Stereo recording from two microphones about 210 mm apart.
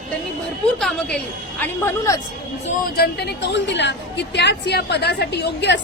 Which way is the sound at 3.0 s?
50° left (ahead or behind).